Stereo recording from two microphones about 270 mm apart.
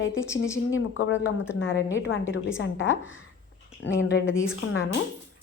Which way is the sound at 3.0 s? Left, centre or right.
Centre.